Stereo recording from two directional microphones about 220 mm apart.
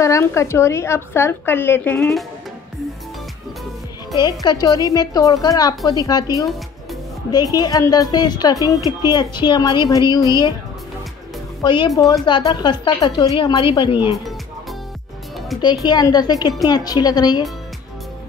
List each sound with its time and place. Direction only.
0.0 s a woman's voice: 15° left (ahead or behind)
4.2 s a woman's voice: 15° left (ahead or behind)
11.6 s a woman's voice: 20° left (ahead or behind)
15.6 s a woman's voice: 20° left (ahead or behind)